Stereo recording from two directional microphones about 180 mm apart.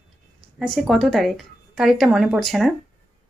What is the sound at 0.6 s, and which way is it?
Speech, centre (ahead or behind).